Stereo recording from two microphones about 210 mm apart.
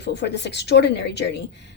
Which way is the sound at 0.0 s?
55° left (ahead or behind).